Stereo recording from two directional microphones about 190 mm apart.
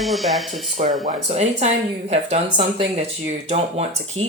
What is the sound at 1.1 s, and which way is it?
Speech, 35° right (ahead or behind).